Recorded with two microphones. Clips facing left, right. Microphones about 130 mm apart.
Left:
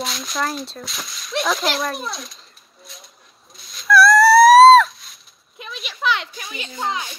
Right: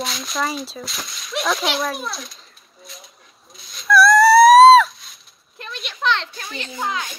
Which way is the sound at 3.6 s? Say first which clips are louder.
Even; centre (ahead or behind).